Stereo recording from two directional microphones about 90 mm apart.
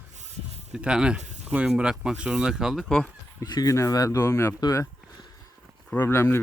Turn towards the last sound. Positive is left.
turn(degrees=30)  # may be behind; listen again after turning